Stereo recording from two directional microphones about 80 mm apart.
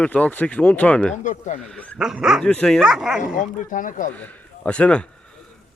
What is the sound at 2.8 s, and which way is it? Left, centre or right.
Speech, centre.